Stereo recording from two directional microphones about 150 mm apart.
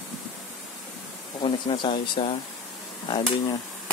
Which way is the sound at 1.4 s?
30° left (ahead or behind).